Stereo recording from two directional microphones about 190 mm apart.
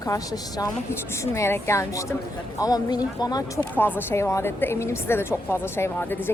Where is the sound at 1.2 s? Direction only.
15° left (ahead or behind).